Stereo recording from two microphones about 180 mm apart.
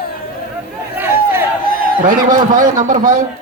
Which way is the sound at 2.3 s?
50° right (ahead or behind).